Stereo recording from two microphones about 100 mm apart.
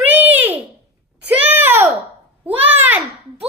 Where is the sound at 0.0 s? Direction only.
15° right (ahead or behind).